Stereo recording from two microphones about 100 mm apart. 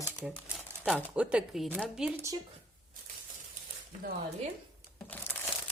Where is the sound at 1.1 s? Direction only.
10° right (ahead or behind).